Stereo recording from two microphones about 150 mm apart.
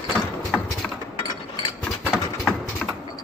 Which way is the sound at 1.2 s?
30° left (ahead or behind).